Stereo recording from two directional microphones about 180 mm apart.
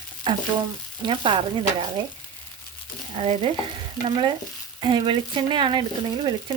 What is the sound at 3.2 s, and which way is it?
Speech, 35° right (ahead or behind).